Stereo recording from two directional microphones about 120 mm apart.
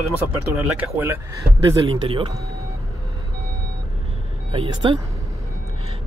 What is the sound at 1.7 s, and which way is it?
Speech, 50° right (ahead or behind).